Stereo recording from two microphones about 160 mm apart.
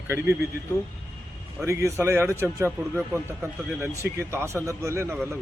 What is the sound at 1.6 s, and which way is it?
A man's voice, 20° right (ahead or behind).